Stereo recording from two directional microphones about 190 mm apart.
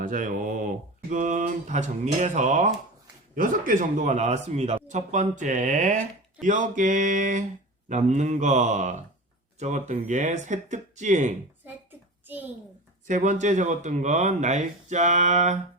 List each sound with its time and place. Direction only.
0.0 s mantra: 45° right (ahead or behind)
3.3 s speech: 45° right (ahead or behind)
11.6 s a sound: 10° right (ahead or behind)
13.1 s speech: 40° right (ahead or behind)